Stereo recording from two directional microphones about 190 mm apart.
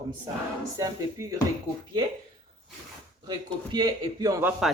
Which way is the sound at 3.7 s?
20° right (ahead or behind).